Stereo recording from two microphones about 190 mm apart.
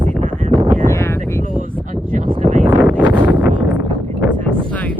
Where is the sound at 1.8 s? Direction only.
40° right (ahead or behind).